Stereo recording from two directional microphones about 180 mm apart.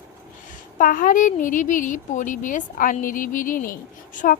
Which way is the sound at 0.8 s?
50° left (ahead or behind).